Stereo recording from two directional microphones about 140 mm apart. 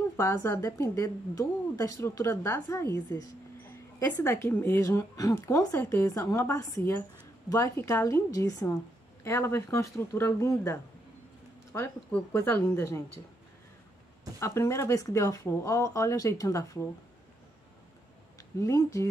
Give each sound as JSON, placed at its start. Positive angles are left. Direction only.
{"t": 0.2, "sound": "a woman's voice", "side_deg": 20}
{"t": 14.4, "sound": "a woman's voice", "side_deg": 20}
{"t": 18.6, "sound": "a woman's voice", "side_deg": 20}